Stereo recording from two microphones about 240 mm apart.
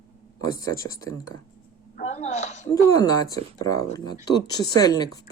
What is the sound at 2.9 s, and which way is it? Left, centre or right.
Speech, centre.